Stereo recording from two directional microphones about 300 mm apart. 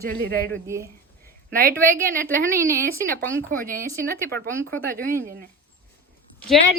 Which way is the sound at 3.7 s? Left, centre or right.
Right.